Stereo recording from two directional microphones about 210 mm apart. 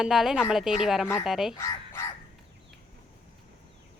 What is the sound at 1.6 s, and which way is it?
Speech, 15° left (ahead or behind).